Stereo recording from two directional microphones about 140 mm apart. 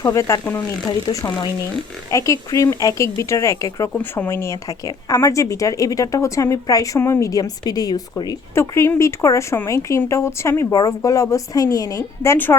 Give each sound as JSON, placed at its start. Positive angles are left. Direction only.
{"t": 0.0, "sound": "a woman's voice", "side_deg": 20}